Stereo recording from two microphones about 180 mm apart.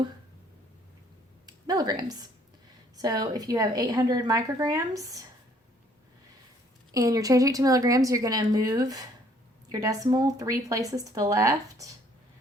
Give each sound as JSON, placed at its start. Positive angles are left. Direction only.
{"t": 1.5, "sound": "a woman's voice", "side_deg": -20}
{"t": 6.9, "sound": "a woman's voice", "side_deg": -20}